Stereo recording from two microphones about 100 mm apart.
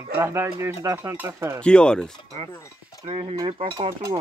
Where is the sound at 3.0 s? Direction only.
65° right (ahead or behind).